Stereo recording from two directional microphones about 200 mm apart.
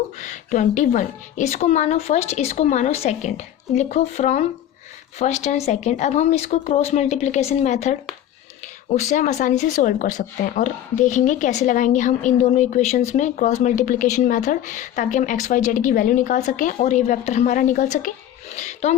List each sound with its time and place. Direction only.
0.2 s speech: 35° left (ahead or behind)